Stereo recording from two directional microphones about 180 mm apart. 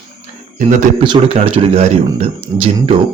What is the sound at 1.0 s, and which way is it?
Speech, 30° right (ahead or behind).